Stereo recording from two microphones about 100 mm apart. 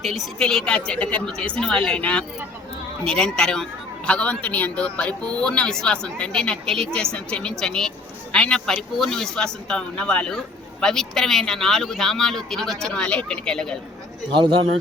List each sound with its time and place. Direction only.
0.0 s a man's voice: centre (ahead or behind)
14.3 s speech: 55° right (ahead or behind)